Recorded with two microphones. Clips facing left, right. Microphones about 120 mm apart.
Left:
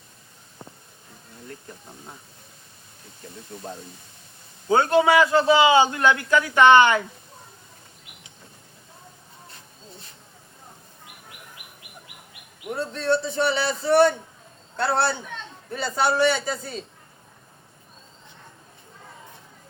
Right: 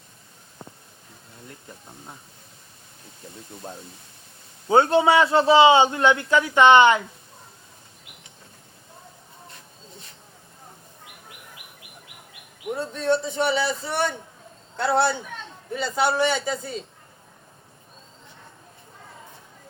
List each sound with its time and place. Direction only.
4.7 s a man's voice: 25° right (ahead or behind)
12.9 s speech: 15° right (ahead or behind)